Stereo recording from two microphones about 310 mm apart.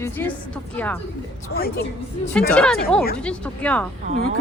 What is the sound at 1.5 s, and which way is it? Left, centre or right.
Speech, left.